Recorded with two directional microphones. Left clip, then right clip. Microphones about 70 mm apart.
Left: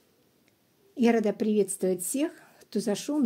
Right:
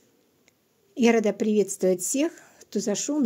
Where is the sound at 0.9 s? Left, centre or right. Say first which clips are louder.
Right 3 dB; right.